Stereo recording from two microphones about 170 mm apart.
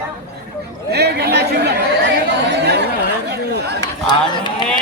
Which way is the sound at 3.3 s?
75° right (ahead or behind).